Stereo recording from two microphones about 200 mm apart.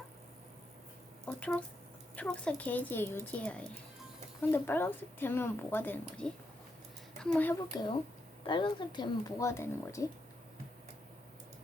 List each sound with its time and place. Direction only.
1.3 s speech: 5° left (ahead or behind)
7.7 s speech: 20° left (ahead or behind)